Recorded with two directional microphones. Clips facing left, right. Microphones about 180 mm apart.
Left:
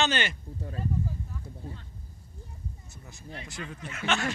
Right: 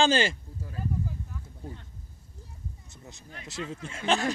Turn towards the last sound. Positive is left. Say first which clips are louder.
# right 3 dB
turn(degrees=-35)  # may be behind; listen again after turning